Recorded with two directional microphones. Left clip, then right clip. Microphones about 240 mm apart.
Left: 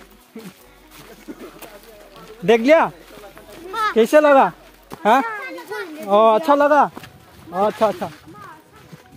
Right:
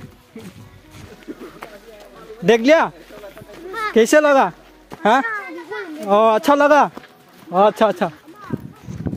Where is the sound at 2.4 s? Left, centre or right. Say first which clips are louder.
Even; centre.